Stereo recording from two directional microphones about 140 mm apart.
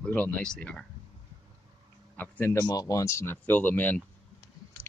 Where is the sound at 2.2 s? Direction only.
15° left (ahead or behind).